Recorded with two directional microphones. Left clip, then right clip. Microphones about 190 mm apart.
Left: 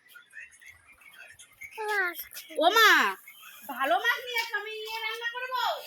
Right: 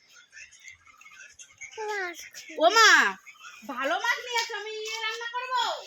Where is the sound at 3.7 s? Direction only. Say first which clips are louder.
Left 2 dB; 30° right (ahead or behind).